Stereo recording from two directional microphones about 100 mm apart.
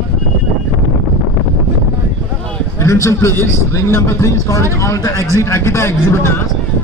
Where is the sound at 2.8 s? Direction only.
30° left (ahead or behind).